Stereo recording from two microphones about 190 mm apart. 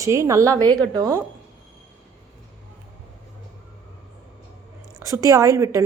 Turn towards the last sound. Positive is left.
turn(degrees=-15)  # may be behind; listen again after turning